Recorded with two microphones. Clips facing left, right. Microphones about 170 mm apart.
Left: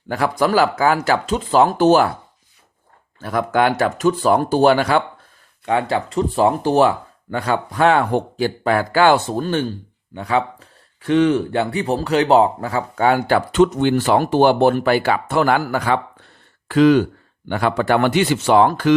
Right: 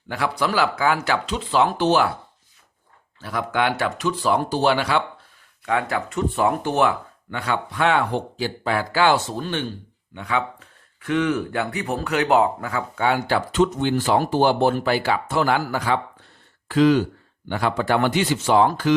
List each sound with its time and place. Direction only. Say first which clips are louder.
0.1 s speech: left 6 dB; 45° left (ahead or behind)
3.2 s speech: left 6 dB; 50° left (ahead or behind)
5.6 s speech: left 4 dB; 30° left (ahead or behind)
13.1 s speech: left 5 dB; 50° left (ahead or behind)